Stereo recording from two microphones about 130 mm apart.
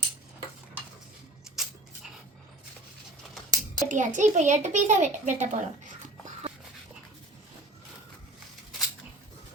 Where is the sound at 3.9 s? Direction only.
75° right (ahead or behind).